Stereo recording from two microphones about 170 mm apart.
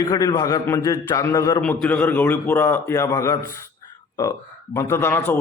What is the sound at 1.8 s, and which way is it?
Speech, 10° left (ahead or behind).